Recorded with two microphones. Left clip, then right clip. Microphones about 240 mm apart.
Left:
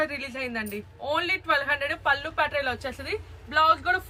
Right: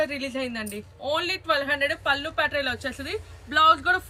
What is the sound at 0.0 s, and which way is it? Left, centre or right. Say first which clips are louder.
A woman's voice: right 2 dB; left.